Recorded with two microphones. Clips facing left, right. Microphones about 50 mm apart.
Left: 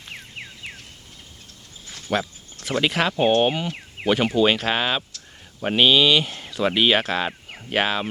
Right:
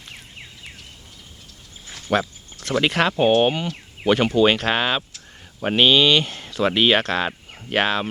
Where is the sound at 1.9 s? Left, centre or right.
Centre.